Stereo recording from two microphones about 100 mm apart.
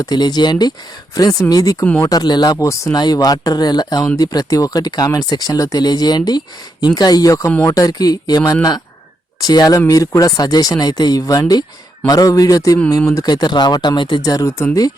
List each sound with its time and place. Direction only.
0.0 s speech: 45° left (ahead or behind)
1.8 s speech: 20° left (ahead or behind)
2.0 s speech: 45° left (ahead or behind)
14.2 s speech: 35° left (ahead or behind)